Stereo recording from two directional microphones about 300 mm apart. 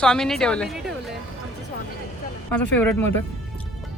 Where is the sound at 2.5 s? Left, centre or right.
Centre.